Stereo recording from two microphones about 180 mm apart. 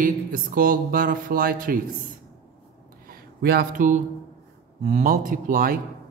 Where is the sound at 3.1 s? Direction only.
60° right (ahead or behind).